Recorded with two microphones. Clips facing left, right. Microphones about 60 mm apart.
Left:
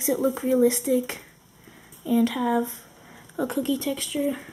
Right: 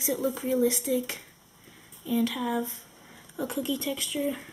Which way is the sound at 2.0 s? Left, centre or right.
Centre.